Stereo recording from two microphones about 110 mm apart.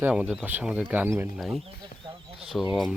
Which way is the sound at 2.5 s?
15° left (ahead or behind).